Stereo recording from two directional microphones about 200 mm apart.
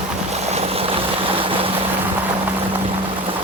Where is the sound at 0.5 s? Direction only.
30° right (ahead or behind).